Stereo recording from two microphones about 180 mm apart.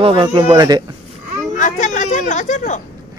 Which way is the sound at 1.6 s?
45° left (ahead or behind).